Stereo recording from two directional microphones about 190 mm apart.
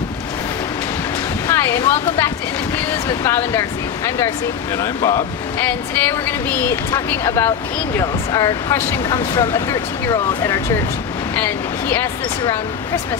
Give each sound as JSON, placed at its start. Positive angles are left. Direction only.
{"t": 1.5, "sound": "speech", "side_deg": 15}
{"t": 4.7, "sound": "speech", "side_deg": 20}